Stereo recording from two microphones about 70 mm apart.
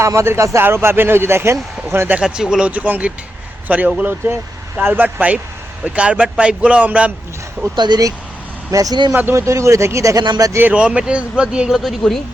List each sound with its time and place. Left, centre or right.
0.0 s speech: right
2.2 s speech: centre
7.8 s speech: right
8.7 s speech: right
9.3 s speech: right
10.2 s speech: right
10.8 s speech: centre
11.7 s speech: centre